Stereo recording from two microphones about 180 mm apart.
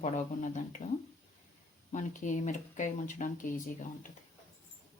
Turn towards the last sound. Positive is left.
turn(degrees=45)  # may be behind; listen again after turning